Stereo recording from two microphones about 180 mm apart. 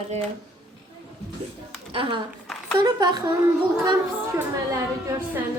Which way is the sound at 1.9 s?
30° right (ahead or behind).